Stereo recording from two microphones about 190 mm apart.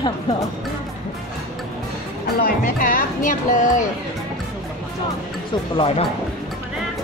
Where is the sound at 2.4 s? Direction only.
45° left (ahead or behind).